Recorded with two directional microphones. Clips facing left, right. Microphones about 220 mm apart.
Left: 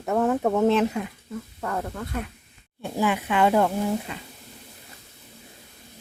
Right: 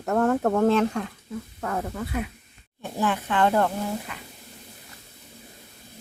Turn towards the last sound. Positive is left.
turn(degrees=25)  # may be behind; listen again after turning